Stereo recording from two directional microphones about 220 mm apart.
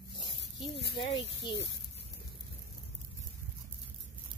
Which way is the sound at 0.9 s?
20° left (ahead or behind).